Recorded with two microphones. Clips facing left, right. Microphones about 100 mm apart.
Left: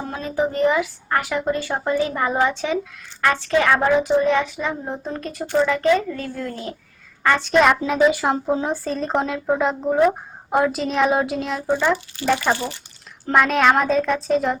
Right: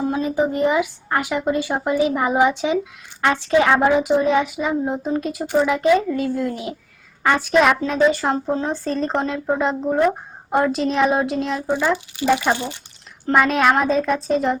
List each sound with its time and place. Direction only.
0.0 s a child's voice: 15° right (ahead or behind)
13.2 s speech: centre (ahead or behind)